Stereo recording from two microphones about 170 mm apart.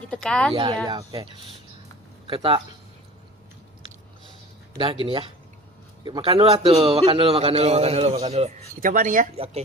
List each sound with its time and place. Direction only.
0.1 s speech: 5° left (ahead or behind)
0.5 s a man's voice: 30° right (ahead or behind)
2.2 s speech: 30° right (ahead or behind)
4.8 s a man's voice: 30° right (ahead or behind); by 9.2 s 50° right (ahead or behind)
9.4 s a man's voice: 40° right (ahead or behind)